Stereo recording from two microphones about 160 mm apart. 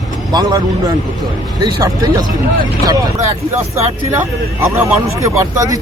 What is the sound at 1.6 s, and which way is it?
Speech, 20° right (ahead or behind).